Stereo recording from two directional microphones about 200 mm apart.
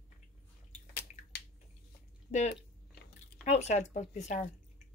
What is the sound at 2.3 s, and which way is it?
Speech, 35° left (ahead or behind).